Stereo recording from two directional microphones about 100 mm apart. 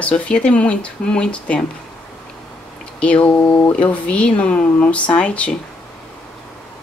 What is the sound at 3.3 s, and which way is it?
Speech, 25° left (ahead or behind).